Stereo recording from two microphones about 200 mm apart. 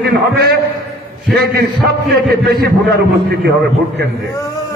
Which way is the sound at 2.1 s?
50° right (ahead or behind).